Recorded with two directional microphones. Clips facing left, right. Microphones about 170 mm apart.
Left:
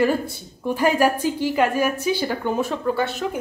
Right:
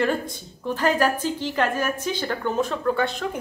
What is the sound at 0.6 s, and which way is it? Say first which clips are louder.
A woman's voice: left 3 dB; 10° left (ahead or behind).